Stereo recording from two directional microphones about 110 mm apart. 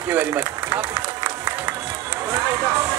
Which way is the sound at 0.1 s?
15° right (ahead or behind).